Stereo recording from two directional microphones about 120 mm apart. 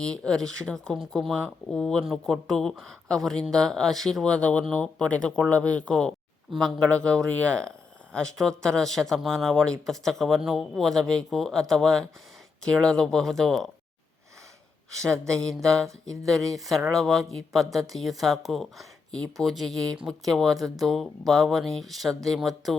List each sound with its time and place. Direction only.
0.0 s speech: 5° left (ahead or behind)
15.1 s speech: 25° right (ahead or behind)
15.4 s speech: 5° left (ahead or behind)
19.7 s speech: 30° right (ahead or behind)
20.1 s speech: centre (ahead or behind)